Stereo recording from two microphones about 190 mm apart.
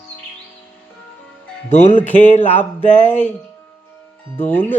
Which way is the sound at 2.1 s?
35° left (ahead or behind).